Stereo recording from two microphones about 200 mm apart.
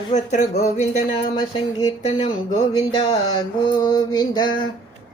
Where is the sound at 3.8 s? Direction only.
20° left (ahead or behind).